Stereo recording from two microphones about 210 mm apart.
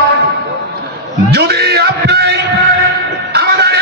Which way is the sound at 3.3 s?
50° right (ahead or behind).